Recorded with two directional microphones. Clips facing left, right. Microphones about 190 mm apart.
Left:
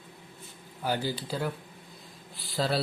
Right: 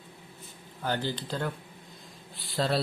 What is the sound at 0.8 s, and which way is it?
A man's voice, 10° left (ahead or behind).